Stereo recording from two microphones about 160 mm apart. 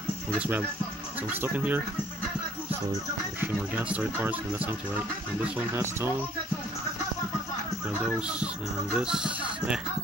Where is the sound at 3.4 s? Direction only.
10° right (ahead or behind).